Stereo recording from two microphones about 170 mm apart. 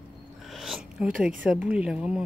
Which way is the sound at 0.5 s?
Centre (ahead or behind).